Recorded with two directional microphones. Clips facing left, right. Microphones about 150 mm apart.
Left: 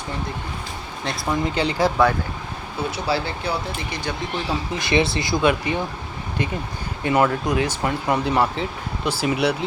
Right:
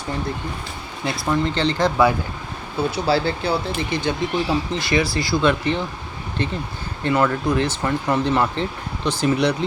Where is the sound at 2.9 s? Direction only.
30° right (ahead or behind).